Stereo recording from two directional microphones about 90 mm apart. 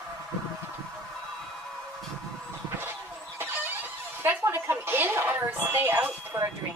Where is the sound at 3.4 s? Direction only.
20° right (ahead or behind).